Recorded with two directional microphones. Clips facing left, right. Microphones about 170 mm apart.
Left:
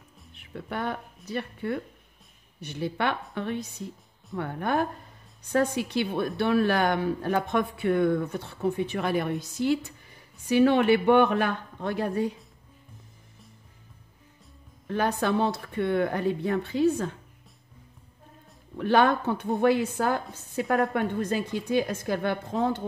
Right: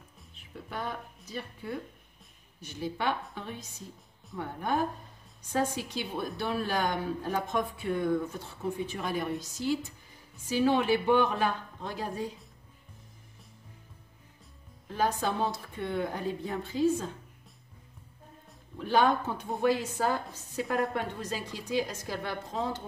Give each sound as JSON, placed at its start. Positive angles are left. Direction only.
{"t": 0.3, "sound": "a woman's voice", "side_deg": 65}
{"t": 14.9, "sound": "speech", "side_deg": 65}
{"t": 18.8, "sound": "a woman's voice", "side_deg": 65}